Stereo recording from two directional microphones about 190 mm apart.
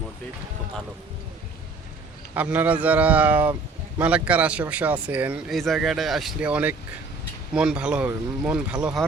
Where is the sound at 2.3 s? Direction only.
10° right (ahead or behind).